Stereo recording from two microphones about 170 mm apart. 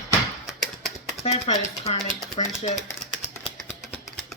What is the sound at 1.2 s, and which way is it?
Speech, 35° left (ahead or behind).